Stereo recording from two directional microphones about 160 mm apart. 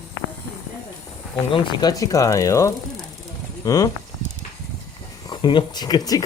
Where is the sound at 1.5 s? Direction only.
30° left (ahead or behind).